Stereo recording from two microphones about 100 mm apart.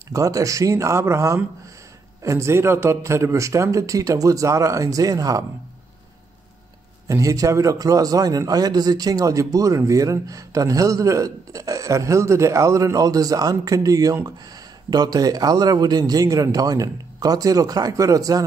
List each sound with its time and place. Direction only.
0.1 s a man's voice: 35° right (ahead or behind)
7.1 s a man's voice: 35° right (ahead or behind)